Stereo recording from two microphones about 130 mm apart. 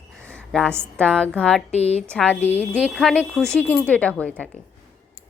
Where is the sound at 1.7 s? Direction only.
55° left (ahead or behind).